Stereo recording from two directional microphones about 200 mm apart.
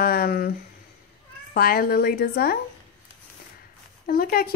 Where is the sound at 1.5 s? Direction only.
50° left (ahead or behind).